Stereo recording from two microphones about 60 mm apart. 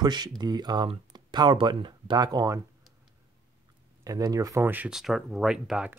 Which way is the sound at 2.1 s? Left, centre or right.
Right.